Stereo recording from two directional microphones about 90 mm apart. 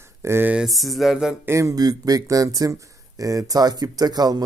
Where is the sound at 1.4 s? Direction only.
30° right (ahead or behind).